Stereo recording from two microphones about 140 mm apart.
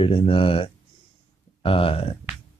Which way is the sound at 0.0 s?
40° left (ahead or behind).